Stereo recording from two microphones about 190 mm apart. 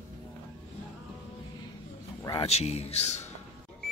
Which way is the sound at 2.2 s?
30° left (ahead or behind).